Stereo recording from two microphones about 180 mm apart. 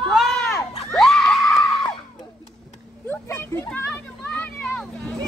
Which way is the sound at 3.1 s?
15° left (ahead or behind).